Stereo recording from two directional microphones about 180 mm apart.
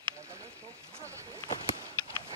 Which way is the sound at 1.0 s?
15° right (ahead or behind).